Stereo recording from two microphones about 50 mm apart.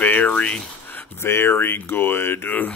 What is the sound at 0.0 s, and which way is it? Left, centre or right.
Speech, left.